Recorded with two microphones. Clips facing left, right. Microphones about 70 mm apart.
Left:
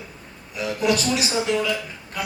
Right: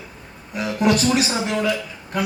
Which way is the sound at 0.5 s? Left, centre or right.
Right.